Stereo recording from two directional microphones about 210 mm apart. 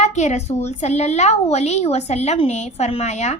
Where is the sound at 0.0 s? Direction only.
35° left (ahead or behind).